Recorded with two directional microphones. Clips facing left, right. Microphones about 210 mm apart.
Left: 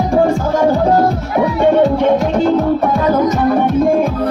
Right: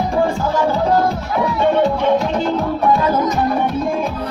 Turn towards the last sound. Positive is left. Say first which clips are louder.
# left 7 dB
turn(degrees=50)  # may be behind; listen again after turning